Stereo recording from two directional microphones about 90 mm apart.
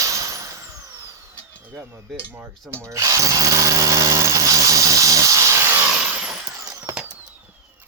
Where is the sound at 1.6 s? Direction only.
25° right (ahead or behind).